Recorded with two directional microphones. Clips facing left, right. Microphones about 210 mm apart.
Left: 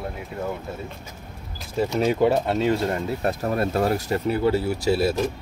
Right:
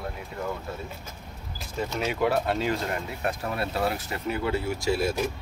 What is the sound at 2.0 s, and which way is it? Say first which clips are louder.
Speech: left 5 dB; 30° left (ahead or behind).